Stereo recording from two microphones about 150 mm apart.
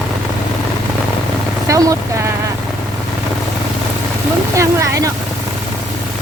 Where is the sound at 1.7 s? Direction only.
20° right (ahead or behind).